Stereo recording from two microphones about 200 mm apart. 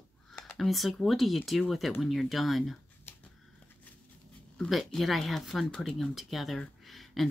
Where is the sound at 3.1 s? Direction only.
10° left (ahead or behind).